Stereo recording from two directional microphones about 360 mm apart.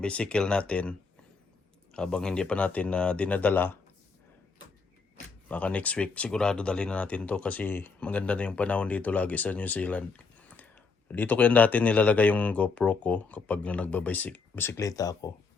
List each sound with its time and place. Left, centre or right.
0.0 s speech: centre
5.5 s speech: centre